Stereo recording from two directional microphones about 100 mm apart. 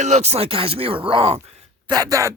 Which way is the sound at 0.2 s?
90° right.